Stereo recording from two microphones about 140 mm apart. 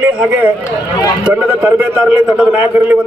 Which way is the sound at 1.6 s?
10° right (ahead or behind).